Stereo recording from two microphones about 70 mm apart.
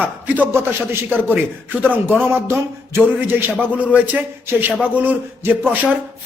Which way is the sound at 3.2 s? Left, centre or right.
Right.